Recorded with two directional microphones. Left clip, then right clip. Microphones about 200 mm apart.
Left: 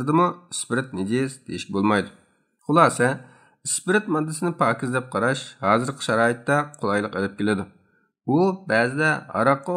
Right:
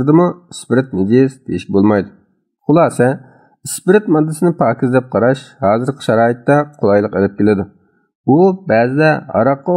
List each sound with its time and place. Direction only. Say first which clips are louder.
0.0 s speech: right 8 dB; 30° right (ahead or behind)